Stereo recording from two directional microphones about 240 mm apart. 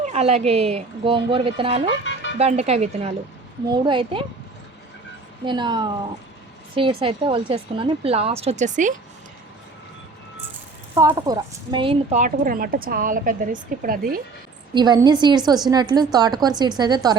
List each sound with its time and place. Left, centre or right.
0.0 s a woman's voice: right
5.5 s a woman's voice: centre
10.9 s a woman's voice: centre; by 14.2 s right
14.7 s a woman's voice: centre